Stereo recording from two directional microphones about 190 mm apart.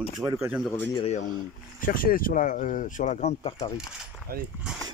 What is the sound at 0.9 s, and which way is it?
Speech, 35° left (ahead or behind).